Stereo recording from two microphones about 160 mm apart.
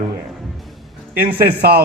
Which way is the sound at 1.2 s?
75° right (ahead or behind).